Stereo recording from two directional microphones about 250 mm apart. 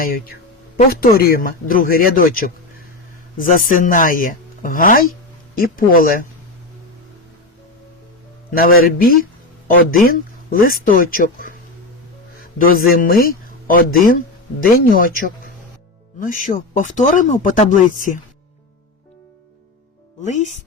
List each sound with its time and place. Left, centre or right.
0.0 s speech: left
8.5 s speech: left
16.2 s speech: left
20.2 s speech: left